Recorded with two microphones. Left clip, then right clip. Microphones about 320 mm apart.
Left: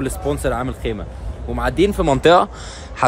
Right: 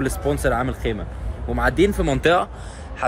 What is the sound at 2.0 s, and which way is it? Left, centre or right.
Speech, left.